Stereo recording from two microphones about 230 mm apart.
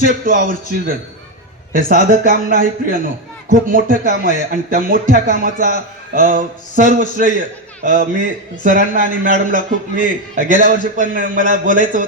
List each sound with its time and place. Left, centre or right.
0.0 s a man's voice: right
1.9 s a man's voice: right